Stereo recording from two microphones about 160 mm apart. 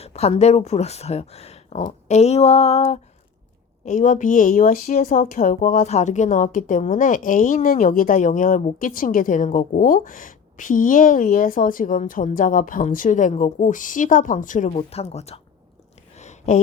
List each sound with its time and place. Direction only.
0.0 s speech: 40° left (ahead or behind)
3.8 s a woman's voice: 55° left (ahead or behind)
14.8 s speech: 40° left (ahead or behind)
16.1 s a sound: 45° left (ahead or behind)